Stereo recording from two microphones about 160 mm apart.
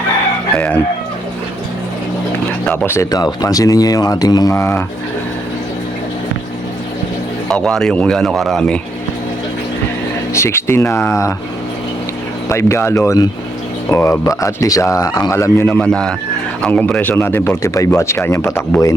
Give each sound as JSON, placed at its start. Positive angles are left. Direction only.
{"t": 0.5, "sound": "chicken", "side_deg": 10}
{"t": 2.6, "sound": "speech", "side_deg": 15}
{"t": 7.4, "sound": "speech", "side_deg": 5}
{"t": 10.3, "sound": "a man's voice", "side_deg": 15}
{"t": 12.5, "sound": "a man's voice", "side_deg": 15}